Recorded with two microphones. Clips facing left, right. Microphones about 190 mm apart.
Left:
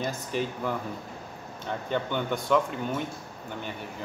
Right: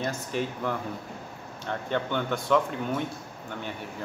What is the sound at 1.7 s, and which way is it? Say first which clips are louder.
Speech: even; 5° left (ahead or behind).